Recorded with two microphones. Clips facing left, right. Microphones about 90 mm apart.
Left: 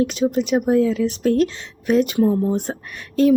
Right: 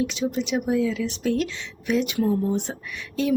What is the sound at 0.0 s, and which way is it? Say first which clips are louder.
Speech: left 6 dB; 50° left (ahead or behind).